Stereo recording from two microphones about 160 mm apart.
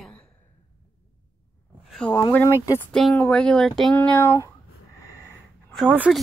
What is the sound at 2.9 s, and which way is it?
Speech, 5° left (ahead or behind).